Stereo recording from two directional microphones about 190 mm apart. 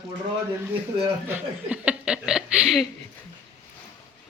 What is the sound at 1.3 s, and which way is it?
Speech, 10° right (ahead or behind).